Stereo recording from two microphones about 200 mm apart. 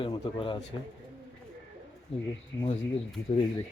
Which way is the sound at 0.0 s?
25° left (ahead or behind).